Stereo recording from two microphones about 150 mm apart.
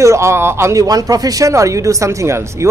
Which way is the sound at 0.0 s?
20° right (ahead or behind).